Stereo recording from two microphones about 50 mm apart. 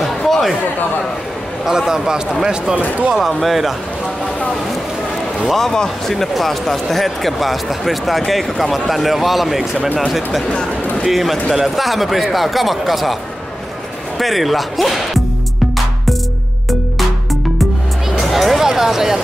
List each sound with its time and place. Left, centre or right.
0.0 s chatter: centre
1.7 s speech: centre
2.7 s speech: right
3.2 s speech: centre
5.4 s speech: centre
14.1 s speech: centre
18.3 s a sound: centre
18.7 s speech: centre